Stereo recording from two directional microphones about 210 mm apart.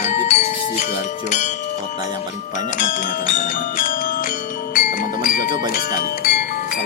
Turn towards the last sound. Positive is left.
turn(degrees=45)  # may be behind; listen again after turning